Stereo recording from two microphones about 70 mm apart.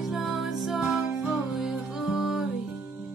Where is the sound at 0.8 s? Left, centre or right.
Centre.